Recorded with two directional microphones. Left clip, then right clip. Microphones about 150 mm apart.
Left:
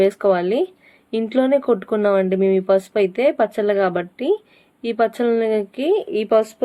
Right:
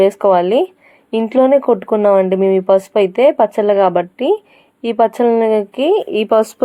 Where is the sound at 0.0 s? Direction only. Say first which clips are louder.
Right 5 dB; 15° right (ahead or behind).